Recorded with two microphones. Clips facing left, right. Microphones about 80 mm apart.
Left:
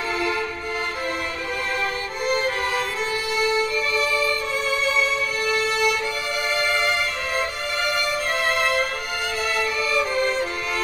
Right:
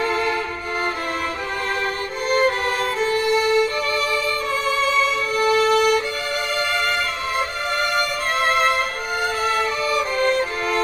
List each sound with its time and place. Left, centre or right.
2.2 s music: right
3.0 s violin: right
5.4 s music: right
9.4 s music: right